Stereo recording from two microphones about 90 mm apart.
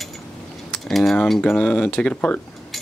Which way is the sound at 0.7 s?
Centre (ahead or behind).